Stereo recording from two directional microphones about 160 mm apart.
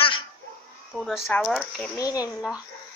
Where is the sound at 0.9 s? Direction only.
Centre (ahead or behind).